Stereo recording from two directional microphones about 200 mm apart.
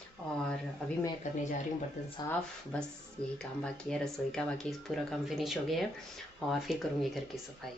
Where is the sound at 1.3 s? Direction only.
40° left (ahead or behind).